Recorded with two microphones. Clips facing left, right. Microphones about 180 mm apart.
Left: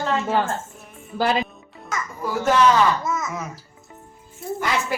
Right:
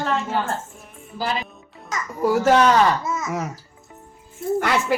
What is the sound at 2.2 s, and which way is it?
Speech, 70° right (ahead or behind).